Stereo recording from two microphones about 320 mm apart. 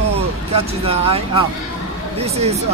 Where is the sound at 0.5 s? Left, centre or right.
Centre.